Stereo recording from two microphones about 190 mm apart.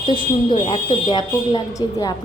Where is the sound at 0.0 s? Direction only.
25° left (ahead or behind).